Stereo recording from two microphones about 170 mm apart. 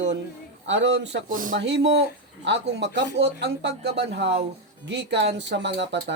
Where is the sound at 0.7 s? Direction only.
90° right.